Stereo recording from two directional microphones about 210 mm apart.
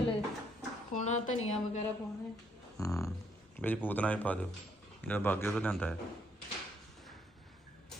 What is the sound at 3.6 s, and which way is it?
Speech, 10° left (ahead or behind).